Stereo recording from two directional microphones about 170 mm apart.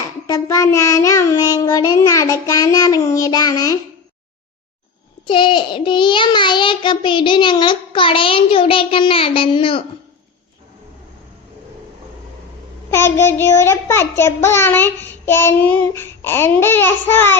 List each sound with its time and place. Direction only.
0.3 s child singing: 20° left (ahead or behind)
5.2 s child singing: 30° left (ahead or behind)
12.9 s a child's voice: 15° left (ahead or behind)